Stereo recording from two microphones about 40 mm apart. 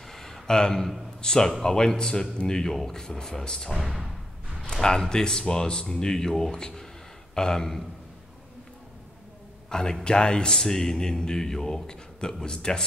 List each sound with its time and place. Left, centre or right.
0.0 s a sound: centre
1.2 s a man's voice: centre
3.7 s speech: centre
4.6 s a man's voice: centre
9.7 s a man's voice: centre